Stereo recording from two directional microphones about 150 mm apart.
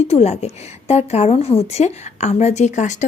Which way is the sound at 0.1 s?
45° left (ahead or behind).